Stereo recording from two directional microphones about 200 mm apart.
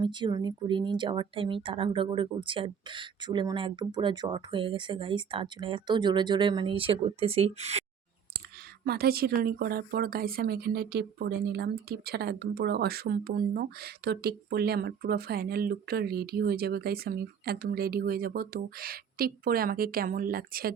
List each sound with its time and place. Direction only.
0.0 s speech: 20° right (ahead or behind)
8.8 s speech: 50° right (ahead or behind)